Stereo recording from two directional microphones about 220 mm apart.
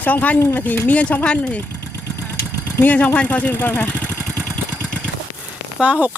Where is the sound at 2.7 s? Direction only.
5° left (ahead or behind).